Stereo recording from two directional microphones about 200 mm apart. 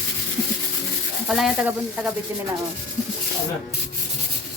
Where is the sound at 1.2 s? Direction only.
5° right (ahead or behind).